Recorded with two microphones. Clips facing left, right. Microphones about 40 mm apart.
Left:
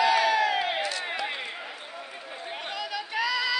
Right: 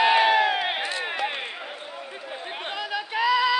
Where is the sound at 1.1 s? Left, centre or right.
Right.